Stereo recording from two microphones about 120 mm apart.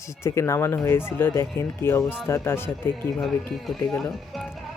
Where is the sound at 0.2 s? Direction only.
20° left (ahead or behind).